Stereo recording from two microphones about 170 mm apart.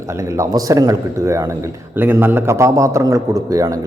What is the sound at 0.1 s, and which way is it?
A man's voice, 15° right (ahead or behind).